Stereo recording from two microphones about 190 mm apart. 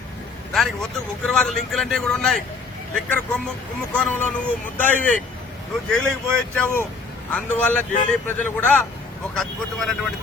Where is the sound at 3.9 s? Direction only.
5° left (ahead or behind).